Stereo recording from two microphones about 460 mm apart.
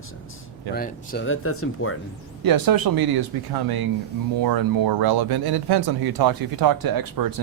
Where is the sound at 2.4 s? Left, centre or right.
Right.